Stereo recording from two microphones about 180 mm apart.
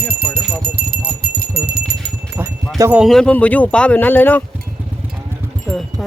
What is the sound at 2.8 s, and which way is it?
Speech, 15° right (ahead or behind).